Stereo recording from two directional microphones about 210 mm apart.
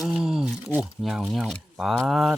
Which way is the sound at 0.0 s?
Centre (ahead or behind).